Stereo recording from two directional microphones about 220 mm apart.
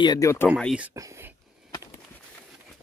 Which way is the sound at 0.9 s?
15° right (ahead or behind).